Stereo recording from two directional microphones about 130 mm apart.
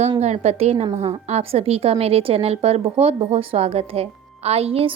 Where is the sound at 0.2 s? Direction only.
55° right (ahead or behind).